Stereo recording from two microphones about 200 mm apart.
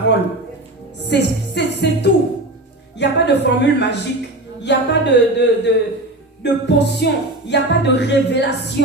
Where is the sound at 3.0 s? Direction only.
60° left (ahead or behind).